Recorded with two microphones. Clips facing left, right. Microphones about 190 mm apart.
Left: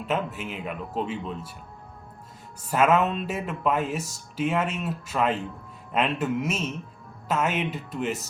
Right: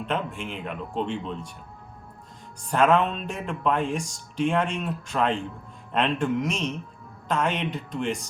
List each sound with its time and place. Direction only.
0.0 s speech: 5° left (ahead or behind)
2.6 s speech: 5° left (ahead or behind)